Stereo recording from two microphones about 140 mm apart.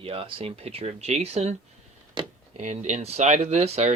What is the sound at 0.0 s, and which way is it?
Speech, 40° right (ahead or behind).